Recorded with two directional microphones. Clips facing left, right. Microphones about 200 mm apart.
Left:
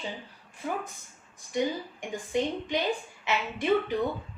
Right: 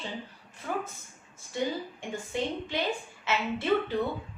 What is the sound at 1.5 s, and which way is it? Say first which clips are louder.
A woman's voice: left 2 dB; 20° left (ahead or behind).